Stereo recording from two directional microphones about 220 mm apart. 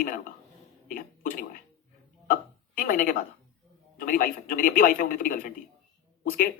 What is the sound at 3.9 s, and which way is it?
Speech, 40° left (ahead or behind).